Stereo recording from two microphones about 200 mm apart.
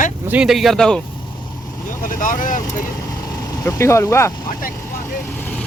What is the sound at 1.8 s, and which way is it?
Speech, 40° left (ahead or behind).